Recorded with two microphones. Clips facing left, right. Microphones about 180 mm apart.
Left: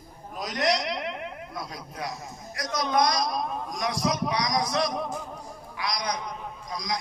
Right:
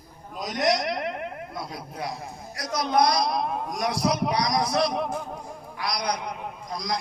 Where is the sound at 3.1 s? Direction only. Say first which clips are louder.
Right 3 dB; 65° right (ahead or behind).